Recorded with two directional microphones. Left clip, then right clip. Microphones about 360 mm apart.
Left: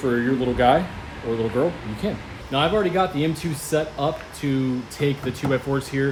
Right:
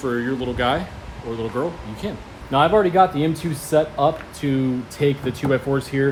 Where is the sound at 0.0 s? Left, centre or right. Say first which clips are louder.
Left 2 dB; centre.